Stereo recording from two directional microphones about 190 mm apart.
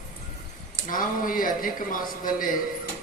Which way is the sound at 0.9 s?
45° left (ahead or behind).